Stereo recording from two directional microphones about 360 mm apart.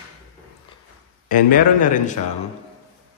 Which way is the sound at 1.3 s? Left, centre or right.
Left.